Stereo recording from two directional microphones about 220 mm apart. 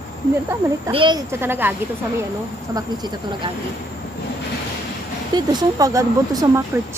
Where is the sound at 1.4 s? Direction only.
10° right (ahead or behind).